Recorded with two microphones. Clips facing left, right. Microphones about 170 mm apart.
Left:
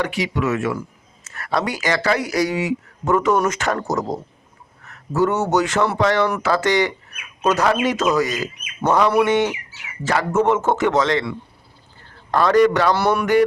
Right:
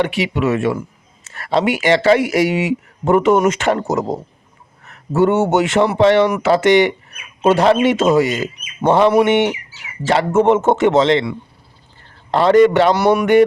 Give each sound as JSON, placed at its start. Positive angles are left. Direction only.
{"t": 0.0, "sound": "speech", "side_deg": -25}